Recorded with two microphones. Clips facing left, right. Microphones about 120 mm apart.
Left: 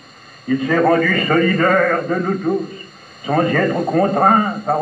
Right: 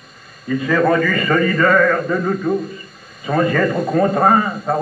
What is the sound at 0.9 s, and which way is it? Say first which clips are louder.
A man's voice: left 1 dB; 45° left (ahead or behind).